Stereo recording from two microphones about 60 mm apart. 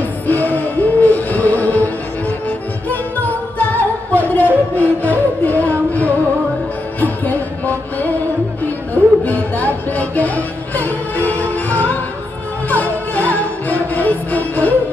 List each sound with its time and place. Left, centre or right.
0.3 s music: left
2.9 s singing: left
4.7 s music: left